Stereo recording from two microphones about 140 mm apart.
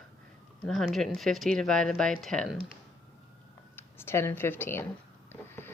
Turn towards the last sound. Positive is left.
turn(degrees=15)  # may be behind; listen again after turning